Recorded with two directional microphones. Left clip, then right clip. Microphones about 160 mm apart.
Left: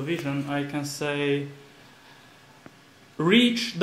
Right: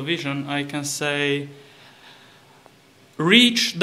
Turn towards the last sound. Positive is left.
turn(degrees=0)  # may be behind; listen again after turning